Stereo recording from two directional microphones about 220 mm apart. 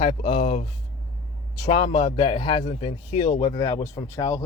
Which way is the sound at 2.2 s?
20° left (ahead or behind).